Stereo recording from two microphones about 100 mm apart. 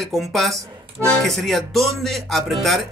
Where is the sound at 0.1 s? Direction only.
Centre (ahead or behind).